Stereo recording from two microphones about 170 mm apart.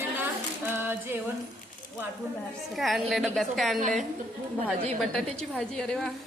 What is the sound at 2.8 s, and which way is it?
A woman's voice, centre (ahead or behind).